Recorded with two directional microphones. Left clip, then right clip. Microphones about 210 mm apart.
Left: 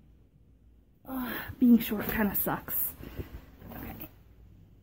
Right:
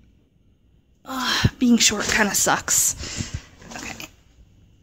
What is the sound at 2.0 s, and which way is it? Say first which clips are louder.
Speech: right 12 dB; 10° right (ahead or behind).